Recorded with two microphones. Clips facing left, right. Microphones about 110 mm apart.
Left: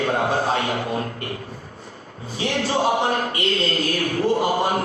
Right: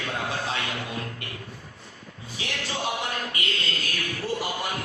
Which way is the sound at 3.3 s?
35° left (ahead or behind).